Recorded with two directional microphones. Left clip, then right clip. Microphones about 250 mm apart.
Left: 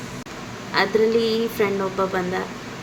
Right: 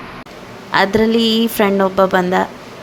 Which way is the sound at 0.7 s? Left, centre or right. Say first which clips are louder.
Right 5 dB; right.